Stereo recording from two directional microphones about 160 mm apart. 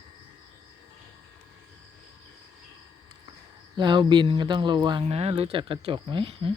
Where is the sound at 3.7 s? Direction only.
30° right (ahead or behind).